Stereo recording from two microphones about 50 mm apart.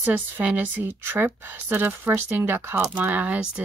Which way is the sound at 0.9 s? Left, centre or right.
Right.